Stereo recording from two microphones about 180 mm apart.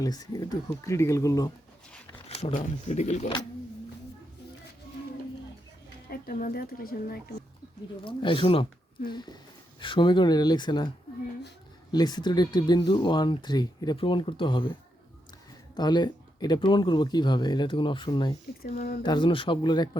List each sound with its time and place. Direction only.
0.0 s speech: 20° left (ahead or behind)
2.5 s speech: 45° left (ahead or behind)
6.1 s speech: 50° left (ahead or behind)
8.0 s speech: 30° left (ahead or behind)
18.6 s speech: 60° left (ahead or behind)
19.0 s speech: 25° left (ahead or behind)